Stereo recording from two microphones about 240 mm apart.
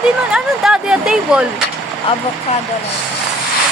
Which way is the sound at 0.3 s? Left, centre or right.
Centre.